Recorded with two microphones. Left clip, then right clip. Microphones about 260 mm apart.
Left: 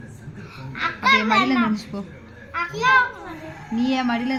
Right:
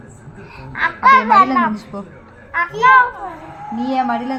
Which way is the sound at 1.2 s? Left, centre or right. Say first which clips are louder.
Right 8 dB; centre.